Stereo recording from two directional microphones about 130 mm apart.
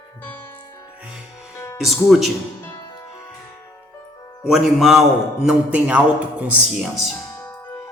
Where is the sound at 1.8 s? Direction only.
Centre (ahead or behind).